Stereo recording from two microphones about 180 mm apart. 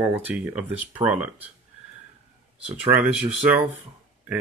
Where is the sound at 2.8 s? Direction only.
10° right (ahead or behind).